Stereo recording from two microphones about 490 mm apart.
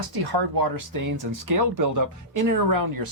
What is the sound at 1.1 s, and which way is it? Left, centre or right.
Speech, right.